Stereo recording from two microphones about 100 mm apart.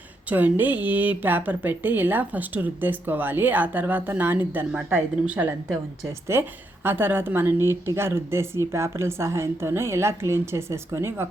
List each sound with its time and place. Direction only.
0.3 s speech: 20° right (ahead or behind)